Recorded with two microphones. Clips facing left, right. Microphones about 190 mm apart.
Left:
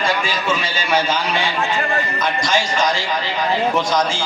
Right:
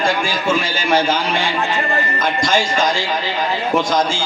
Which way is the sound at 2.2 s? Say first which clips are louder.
Right 3 dB; 50° right (ahead or behind).